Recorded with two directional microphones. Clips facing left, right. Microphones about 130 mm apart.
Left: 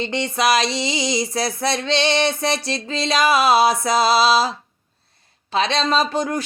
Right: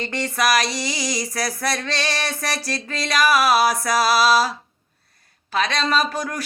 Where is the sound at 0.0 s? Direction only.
20° left (ahead or behind).